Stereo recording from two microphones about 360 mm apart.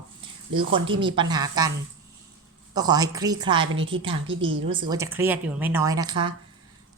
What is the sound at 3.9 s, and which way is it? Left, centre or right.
A woman's voice, centre.